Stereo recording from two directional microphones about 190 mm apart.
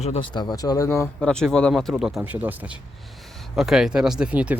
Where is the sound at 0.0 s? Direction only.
30° left (ahead or behind).